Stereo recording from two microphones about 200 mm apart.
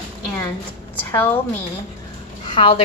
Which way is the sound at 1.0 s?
10° left (ahead or behind).